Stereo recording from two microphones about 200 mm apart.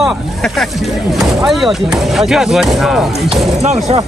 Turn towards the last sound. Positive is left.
turn(degrees=-35)  # may be behind; listen again after turning